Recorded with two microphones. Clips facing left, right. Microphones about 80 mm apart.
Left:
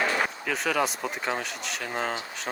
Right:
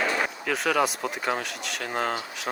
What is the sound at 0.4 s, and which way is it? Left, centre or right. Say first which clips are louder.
Speech: right 5 dB; centre.